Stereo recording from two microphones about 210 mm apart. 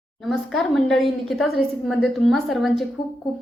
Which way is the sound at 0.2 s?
Centre (ahead or behind).